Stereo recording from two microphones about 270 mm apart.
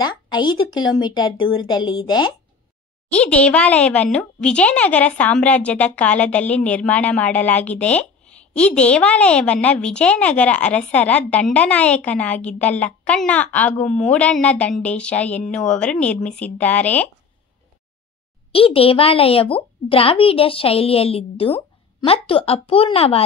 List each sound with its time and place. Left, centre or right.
0.0 s speech: centre
1.3 s a woman's voice: left
1.6 s speech: centre
3.1 s speech: centre
18.5 s a woman's voice: left